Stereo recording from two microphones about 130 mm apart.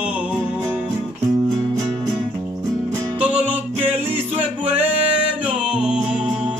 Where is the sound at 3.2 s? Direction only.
10° right (ahead or behind).